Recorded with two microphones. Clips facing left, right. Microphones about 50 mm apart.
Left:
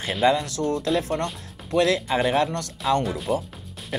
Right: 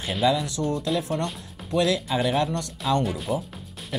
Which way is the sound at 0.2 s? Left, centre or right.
Left.